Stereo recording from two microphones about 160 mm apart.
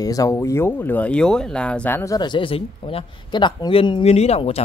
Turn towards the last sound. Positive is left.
turn(degrees=40)  # may be behind; listen again after turning